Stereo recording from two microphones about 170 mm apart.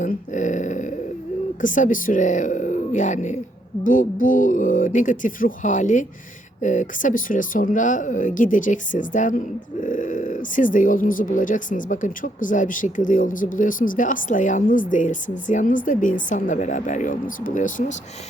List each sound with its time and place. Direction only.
0.0 s dog: 45° left (ahead or behind)
1.6 s speech: 50° left (ahead or behind)